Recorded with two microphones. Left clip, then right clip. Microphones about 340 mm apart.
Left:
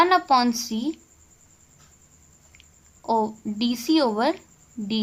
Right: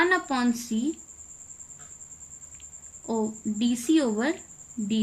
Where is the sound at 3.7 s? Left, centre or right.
Centre.